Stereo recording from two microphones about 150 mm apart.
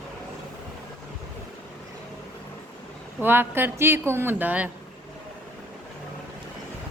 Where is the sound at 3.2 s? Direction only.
15° right (ahead or behind).